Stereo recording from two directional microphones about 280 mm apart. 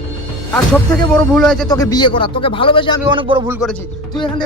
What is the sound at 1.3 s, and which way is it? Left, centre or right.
Speech, centre.